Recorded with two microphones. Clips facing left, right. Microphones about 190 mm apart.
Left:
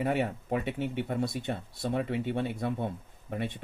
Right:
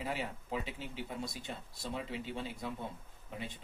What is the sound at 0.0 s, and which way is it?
Speech, 65° left (ahead or behind).